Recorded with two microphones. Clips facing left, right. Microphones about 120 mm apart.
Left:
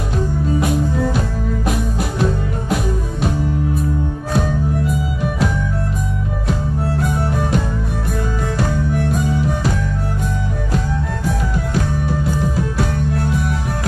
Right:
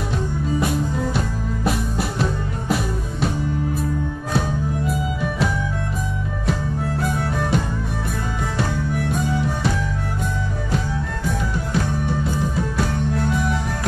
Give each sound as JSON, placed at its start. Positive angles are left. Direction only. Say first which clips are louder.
{"t": 0.6, "sound": "music", "louder": "left 4 dB", "side_deg": 0}
{"t": 4.8, "sound": "music", "louder": "left 2 dB", "side_deg": 0}
{"t": 7.0, "sound": "music", "louder": "left 2 dB", "side_deg": 0}
{"t": 11.2, "sound": "music", "louder": "left 2 dB", "side_deg": 0}
{"t": 13.1, "sound": "music", "louder": "left 1 dB", "side_deg": 50}